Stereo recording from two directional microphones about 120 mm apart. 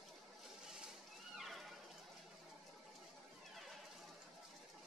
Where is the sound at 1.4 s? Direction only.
Centre (ahead or behind).